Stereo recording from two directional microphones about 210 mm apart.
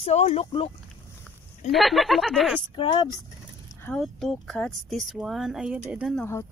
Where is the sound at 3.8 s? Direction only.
5° left (ahead or behind).